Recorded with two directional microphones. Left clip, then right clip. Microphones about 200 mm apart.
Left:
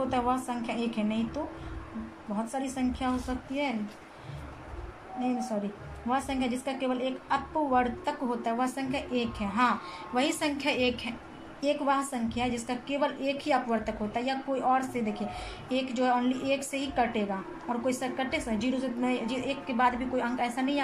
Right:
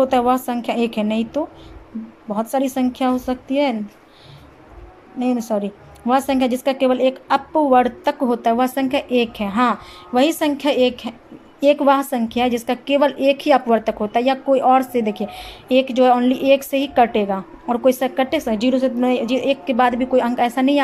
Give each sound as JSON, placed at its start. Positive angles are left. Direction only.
{"t": 0.1, "sound": "a woman's voice", "side_deg": -45}
{"t": 5.2, "sound": "a woman's voice", "side_deg": -45}